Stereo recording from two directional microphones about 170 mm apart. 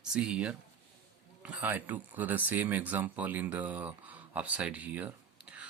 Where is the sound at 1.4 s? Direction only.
10° right (ahead or behind).